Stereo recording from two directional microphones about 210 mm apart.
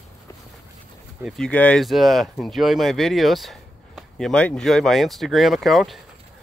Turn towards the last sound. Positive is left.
turn(degrees=0)  # may be behind; listen again after turning